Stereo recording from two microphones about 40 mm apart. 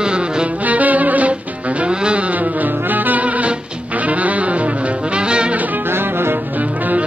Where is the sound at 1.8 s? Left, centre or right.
Right.